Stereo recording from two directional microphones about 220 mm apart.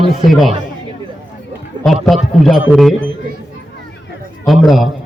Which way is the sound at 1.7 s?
20° right (ahead or behind).